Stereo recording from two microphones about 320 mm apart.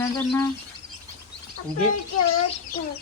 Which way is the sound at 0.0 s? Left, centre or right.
Centre.